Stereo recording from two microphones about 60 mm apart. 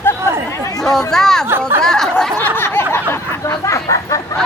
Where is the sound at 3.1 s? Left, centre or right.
Left.